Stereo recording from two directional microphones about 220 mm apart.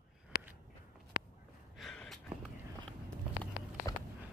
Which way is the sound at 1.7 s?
Centre (ahead or behind).